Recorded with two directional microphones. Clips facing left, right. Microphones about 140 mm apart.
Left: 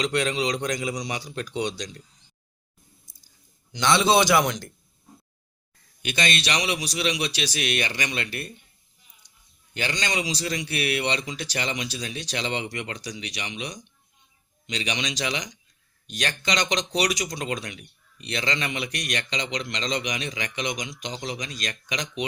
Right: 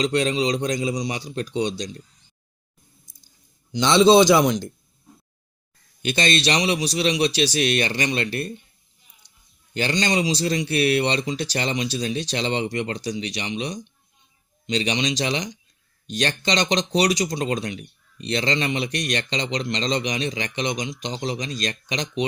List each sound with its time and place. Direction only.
0.0 s speech: 30° right (ahead or behind)
3.7 s speech: 20° right (ahead or behind)
6.0 s speech: 30° right (ahead or behind)
9.2 s a sound: 30° right (ahead or behind)
9.7 s speech: 35° right (ahead or behind)